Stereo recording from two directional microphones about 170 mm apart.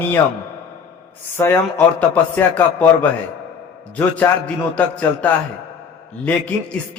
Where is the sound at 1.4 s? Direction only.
15° left (ahead or behind).